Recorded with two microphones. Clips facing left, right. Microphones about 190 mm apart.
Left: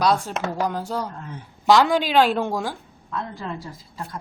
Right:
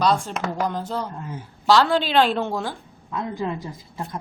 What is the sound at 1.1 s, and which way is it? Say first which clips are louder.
Speech: right 3 dB; 5° right (ahead or behind).